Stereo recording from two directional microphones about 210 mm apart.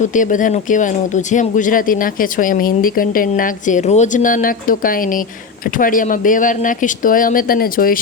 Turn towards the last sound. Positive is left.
turn(degrees=45)  # may be behind; listen again after turning